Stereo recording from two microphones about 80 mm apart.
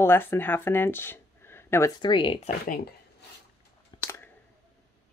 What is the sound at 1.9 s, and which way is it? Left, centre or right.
Speech, left.